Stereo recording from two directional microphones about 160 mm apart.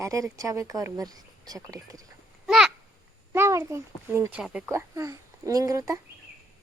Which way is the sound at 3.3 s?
20° right (ahead or behind).